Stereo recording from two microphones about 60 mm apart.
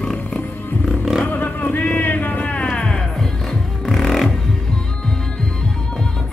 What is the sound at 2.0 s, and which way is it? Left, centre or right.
Music, left.